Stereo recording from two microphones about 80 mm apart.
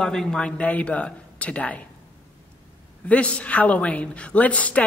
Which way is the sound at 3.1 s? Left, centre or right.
Centre.